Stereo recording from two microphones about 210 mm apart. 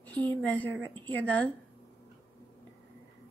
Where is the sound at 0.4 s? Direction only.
5° left (ahead or behind).